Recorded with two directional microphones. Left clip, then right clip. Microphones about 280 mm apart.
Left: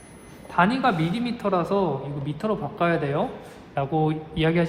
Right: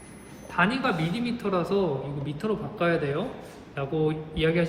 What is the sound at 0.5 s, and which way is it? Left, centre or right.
A woman's voice, left.